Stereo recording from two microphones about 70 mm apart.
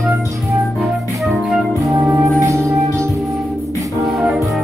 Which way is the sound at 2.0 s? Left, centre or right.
Right.